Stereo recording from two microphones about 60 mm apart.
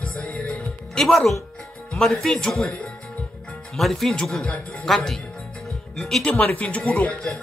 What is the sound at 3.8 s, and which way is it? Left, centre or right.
Speech, centre.